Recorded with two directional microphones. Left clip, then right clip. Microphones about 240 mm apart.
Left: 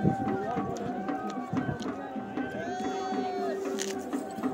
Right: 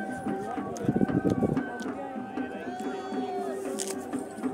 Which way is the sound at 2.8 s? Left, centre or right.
Left.